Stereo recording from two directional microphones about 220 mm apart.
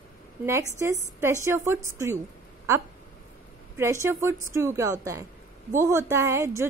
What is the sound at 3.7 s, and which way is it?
A woman's voice, 15° right (ahead or behind).